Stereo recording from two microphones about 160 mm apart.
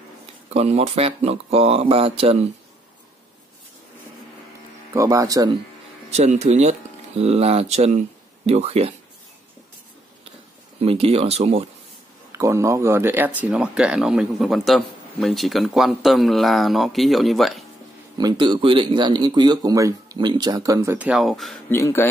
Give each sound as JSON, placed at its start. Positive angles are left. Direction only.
{"t": 0.5, "sound": "speech", "side_deg": -40}
{"t": 4.9, "sound": "speech", "side_deg": -20}
{"t": 6.1, "sound": "speech", "side_deg": -45}
{"t": 10.8, "sound": "speech", "side_deg": -35}
{"t": 12.3, "sound": "speech", "side_deg": -20}
{"t": 18.1, "sound": "speech", "side_deg": -25}
{"t": 21.6, "sound": "speech", "side_deg": 15}